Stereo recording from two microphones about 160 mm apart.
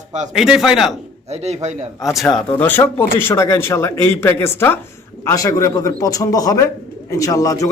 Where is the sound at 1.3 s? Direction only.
45° right (ahead or behind).